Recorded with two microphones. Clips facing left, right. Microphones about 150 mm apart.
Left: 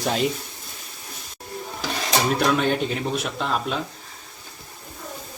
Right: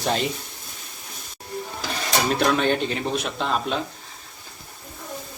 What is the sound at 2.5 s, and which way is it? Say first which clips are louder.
A man's voice: even; 5° left (ahead or behind).